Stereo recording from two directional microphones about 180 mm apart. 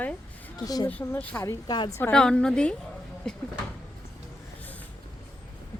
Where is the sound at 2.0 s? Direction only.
10° left (ahead or behind).